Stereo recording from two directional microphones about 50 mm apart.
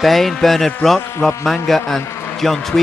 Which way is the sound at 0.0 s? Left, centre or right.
Centre.